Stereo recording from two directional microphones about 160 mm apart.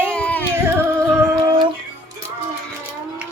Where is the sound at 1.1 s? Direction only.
25° right (ahead or behind).